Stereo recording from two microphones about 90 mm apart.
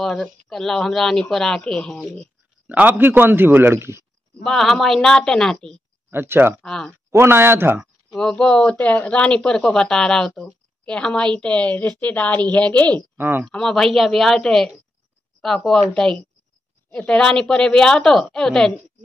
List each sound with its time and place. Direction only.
0.0 s a woman's voice: 10° left (ahead or behind)
2.7 s a man's voice: 20° right (ahead or behind)
4.4 s speech: 5° left (ahead or behind)
6.0 s speech: 25° right (ahead or behind)
6.6 s speech: 5° left (ahead or behind)
7.1 s a man's voice: 25° right (ahead or behind)
8.1 s speech: 5° left (ahead or behind)
13.2 s a man's voice: 20° right (ahead or behind)
13.5 s a woman's voice: 5° left (ahead or behind)